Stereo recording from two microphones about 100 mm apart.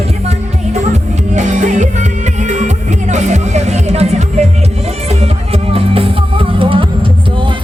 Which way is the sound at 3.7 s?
90° right.